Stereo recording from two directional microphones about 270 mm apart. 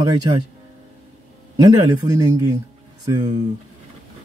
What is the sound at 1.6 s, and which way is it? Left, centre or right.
Speech, centre.